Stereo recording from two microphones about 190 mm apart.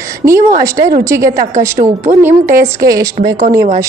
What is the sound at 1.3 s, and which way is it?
Speech, 45° right (ahead or behind).